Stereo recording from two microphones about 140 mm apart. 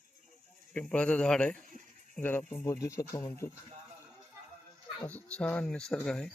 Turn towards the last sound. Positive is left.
turn(degrees=5)  # may be behind; listen again after turning